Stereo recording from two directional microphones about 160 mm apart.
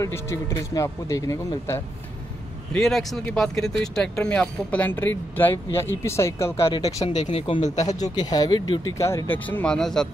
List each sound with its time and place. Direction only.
0.0 s speech: 20° left (ahead or behind)
2.7 s speech: centre (ahead or behind)
6.7 s speech: 40° left (ahead or behind)
7.7 s speech: 25° left (ahead or behind); by 10.0 s 5° left (ahead or behind)